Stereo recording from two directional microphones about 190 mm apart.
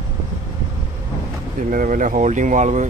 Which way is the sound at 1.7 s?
45° right (ahead or behind).